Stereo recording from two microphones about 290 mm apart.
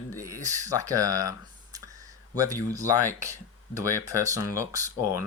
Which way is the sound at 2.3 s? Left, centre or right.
Centre.